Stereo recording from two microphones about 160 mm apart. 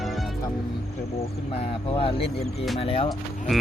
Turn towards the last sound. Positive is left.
turn(degrees=35)  # may be behind; listen again after turning